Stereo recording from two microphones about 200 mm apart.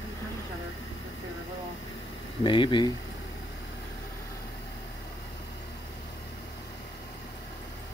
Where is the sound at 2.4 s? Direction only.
25° left (ahead or behind).